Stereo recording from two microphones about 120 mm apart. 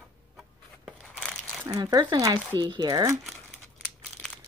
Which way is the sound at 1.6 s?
30° right (ahead or behind).